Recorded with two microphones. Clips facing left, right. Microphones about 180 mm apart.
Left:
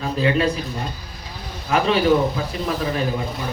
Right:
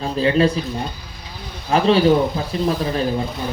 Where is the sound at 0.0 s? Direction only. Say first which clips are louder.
Right 3 dB; 30° right (ahead or behind).